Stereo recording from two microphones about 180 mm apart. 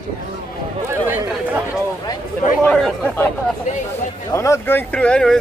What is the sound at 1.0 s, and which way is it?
Speech, 10° right (ahead or behind).